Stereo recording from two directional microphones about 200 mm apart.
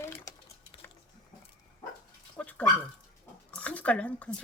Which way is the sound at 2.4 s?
5° left (ahead or behind).